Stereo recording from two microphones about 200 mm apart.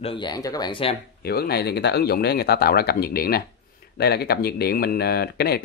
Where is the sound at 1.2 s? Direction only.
50° left (ahead or behind).